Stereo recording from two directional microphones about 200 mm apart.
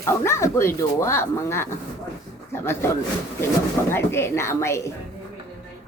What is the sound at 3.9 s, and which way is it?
Speech, 10° left (ahead or behind).